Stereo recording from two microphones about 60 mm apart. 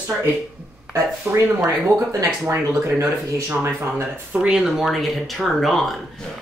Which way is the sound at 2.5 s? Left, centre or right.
Right.